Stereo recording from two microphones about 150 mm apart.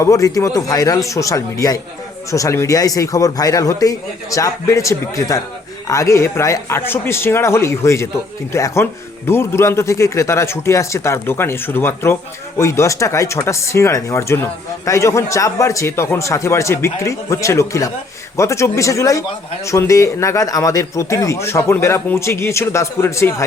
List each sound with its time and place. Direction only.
0.0 s speech: 20° left (ahead or behind)